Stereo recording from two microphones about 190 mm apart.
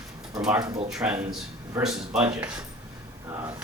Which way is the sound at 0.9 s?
5° right (ahead or behind).